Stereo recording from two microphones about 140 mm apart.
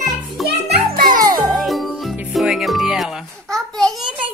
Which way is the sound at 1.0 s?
90° right.